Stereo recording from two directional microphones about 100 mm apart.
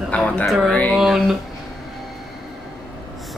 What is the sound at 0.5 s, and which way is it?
Speech, centre (ahead or behind).